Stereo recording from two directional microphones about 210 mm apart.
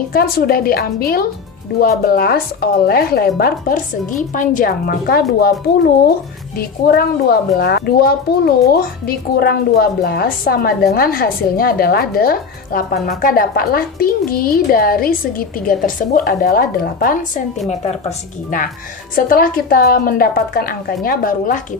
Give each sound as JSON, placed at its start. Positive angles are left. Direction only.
{"t": 0.1, "sound": "a woman's voice", "side_deg": 45}
{"t": 6.6, "sound": "a woman's voice", "side_deg": 45}
{"t": 19.1, "sound": "a woman's voice", "side_deg": 45}